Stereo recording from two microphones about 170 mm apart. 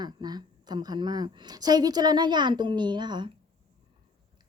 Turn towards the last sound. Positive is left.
turn(degrees=-25)  # may be behind; listen again after turning